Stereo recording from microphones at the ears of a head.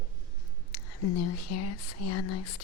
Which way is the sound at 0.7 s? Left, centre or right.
Left.